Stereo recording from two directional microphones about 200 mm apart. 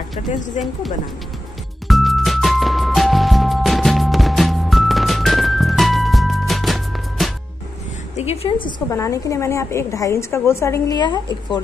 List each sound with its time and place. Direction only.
0.6 s speech: 35° left (ahead or behind)
1.9 s music: centre (ahead or behind)
8.2 s a woman's voice: 30° left (ahead or behind)